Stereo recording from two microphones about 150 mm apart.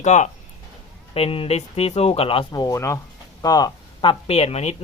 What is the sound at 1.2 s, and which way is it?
Speech, 40° left (ahead or behind).